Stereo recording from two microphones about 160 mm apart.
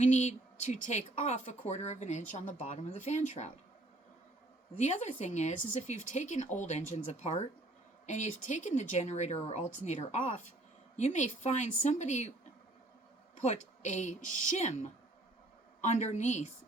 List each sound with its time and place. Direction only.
0.0 s speech: 45° left (ahead or behind)
4.8 s speech: 45° left (ahead or behind)
13.4 s speech: 45° left (ahead or behind)